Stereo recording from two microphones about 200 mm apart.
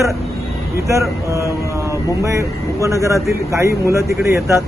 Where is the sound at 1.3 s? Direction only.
15° right (ahead or behind).